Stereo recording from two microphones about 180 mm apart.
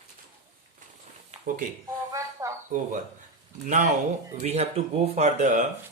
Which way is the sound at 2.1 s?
15° right (ahead or behind).